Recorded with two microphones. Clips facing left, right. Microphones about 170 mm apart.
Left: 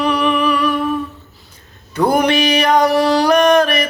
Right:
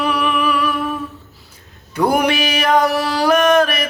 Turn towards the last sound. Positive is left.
turn(degrees=-5)  # may be behind; listen again after turning